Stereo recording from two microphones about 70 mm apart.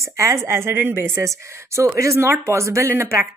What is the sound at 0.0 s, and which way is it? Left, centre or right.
A woman's voice, right.